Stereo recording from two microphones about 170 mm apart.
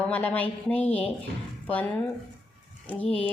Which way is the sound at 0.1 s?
10° left (ahead or behind).